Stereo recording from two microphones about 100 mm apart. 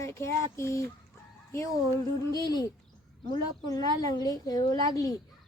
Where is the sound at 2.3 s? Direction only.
40° left (ahead or behind).